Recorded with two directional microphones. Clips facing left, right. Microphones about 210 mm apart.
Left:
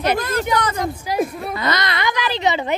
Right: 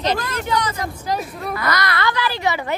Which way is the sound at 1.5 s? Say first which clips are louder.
Even; 25° left (ahead or behind).